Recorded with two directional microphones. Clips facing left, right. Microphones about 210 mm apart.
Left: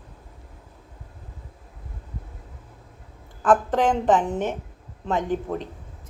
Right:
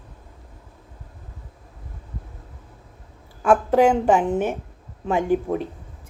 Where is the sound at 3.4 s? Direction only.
10° right (ahead or behind).